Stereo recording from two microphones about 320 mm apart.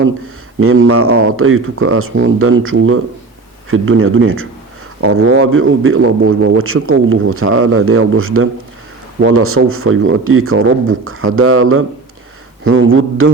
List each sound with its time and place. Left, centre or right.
0.6 s a man's voice: right